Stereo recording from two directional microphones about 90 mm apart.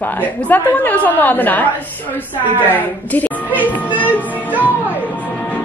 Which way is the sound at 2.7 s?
20° left (ahead or behind).